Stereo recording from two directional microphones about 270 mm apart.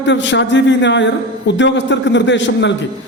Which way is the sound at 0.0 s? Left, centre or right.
Left.